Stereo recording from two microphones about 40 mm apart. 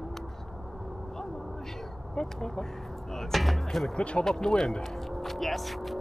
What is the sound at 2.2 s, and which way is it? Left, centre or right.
Speech, centre.